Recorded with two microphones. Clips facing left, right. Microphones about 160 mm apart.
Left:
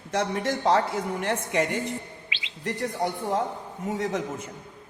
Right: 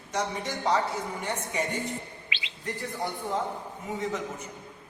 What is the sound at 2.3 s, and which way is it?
Chirp, 55° right (ahead or behind).